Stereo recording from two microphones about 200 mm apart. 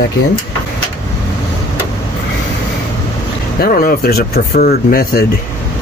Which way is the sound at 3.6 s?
45° left (ahead or behind).